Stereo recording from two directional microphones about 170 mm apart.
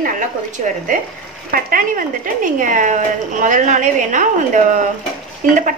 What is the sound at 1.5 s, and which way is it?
Speech, 55° right (ahead or behind).